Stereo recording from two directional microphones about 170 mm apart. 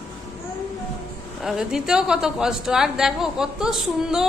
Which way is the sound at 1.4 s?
5° right (ahead or behind).